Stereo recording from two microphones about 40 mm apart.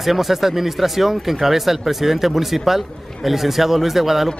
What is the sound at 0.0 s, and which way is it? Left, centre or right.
A man's voice, centre.